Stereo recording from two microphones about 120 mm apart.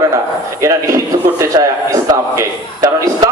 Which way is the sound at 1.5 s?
30° right (ahead or behind).